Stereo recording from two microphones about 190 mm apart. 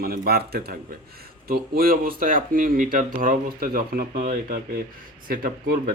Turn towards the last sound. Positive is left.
turn(degrees=-50)  # may be behind; listen again after turning